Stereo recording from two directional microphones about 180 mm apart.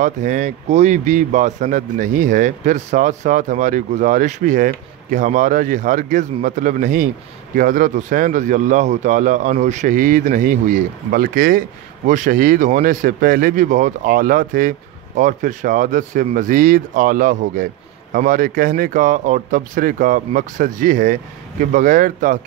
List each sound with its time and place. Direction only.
0.0 s speech: 45° right (ahead or behind)